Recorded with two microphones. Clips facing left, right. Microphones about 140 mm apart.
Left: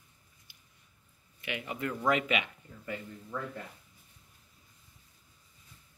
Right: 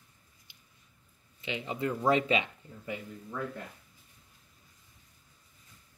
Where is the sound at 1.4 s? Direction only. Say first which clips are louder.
Right 3 dB; 25° right (ahead or behind).